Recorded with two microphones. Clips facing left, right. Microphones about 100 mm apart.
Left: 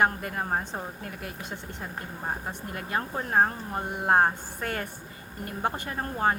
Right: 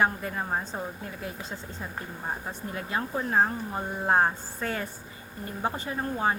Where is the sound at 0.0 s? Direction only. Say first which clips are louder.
Left 1 dB; 55° left (ahead or behind).